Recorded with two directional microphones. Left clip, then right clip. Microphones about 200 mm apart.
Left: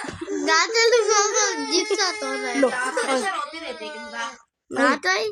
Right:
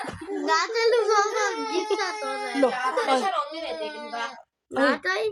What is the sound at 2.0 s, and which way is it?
Speech, 40° left (ahead or behind).